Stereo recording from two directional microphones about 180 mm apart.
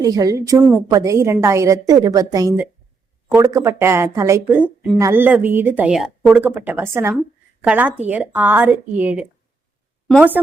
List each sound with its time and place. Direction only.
0.0 s a woman's voice: 20° right (ahead or behind)